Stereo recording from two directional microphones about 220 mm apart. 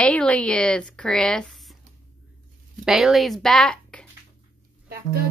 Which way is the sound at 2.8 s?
Centre (ahead or behind).